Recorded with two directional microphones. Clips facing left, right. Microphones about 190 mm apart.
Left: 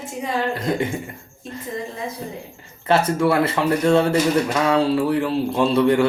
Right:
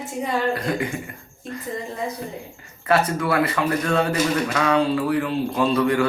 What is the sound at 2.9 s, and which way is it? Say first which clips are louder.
Speech: left 3 dB; 25° left (ahead or behind).